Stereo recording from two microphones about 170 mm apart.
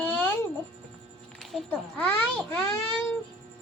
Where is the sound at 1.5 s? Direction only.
10° left (ahead or behind).